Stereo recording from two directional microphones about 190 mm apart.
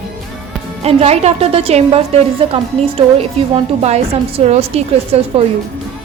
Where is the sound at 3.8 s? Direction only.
35° right (ahead or behind).